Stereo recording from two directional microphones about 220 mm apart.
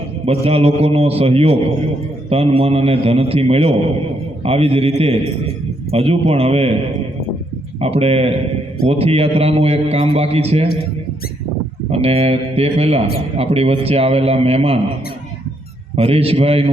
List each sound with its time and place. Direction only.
0.3 s a man's voice: 25° right (ahead or behind)
7.8 s a man's voice: 25° right (ahead or behind)
11.9 s a man's voice: 25° right (ahead or behind)
16.0 s a man's voice: 25° right (ahead or behind)